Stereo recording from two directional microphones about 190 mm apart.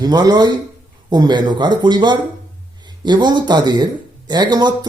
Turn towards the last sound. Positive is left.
turn(degrees=-20)  # may be behind; listen again after turning